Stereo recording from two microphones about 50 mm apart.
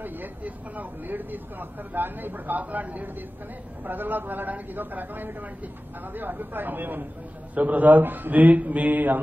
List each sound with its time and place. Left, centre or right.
0.0 s speech: right